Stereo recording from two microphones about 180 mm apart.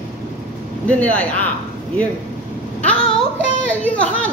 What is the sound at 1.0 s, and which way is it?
Speech, 10° left (ahead or behind).